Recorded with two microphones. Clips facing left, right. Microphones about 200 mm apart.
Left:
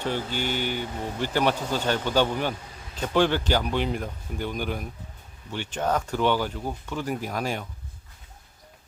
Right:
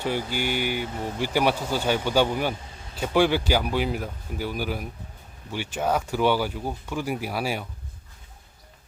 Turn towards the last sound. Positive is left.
turn(degrees=-10)  # may be behind; listen again after turning